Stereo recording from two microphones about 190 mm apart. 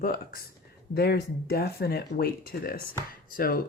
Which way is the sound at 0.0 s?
50° left (ahead or behind).